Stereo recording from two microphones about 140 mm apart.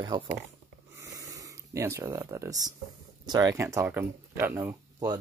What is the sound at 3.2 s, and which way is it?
Speech, 30° right (ahead or behind).